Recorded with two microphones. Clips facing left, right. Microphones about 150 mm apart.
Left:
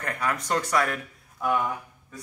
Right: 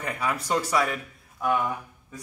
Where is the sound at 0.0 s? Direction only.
5° right (ahead or behind).